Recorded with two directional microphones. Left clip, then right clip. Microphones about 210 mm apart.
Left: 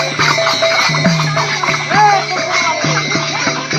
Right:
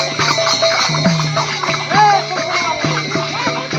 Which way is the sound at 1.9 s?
40° left (ahead or behind).